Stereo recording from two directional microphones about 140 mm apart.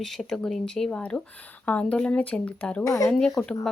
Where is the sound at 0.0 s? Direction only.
Centre (ahead or behind).